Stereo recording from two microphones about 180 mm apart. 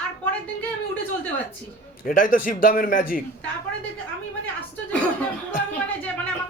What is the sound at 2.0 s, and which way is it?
A man's voice, 50° left (ahead or behind).